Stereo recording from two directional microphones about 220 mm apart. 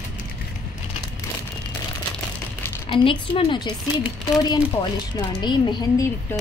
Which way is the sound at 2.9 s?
25° left (ahead or behind).